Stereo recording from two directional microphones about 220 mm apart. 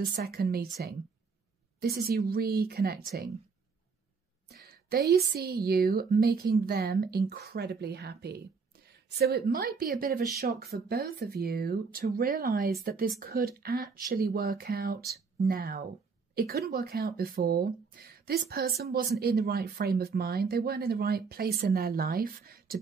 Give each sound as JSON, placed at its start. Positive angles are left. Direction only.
{"t": 0.0, "sound": "speech", "side_deg": -40}
{"t": 1.8, "sound": "speech", "side_deg": -45}
{"t": 4.5, "sound": "speech", "side_deg": -45}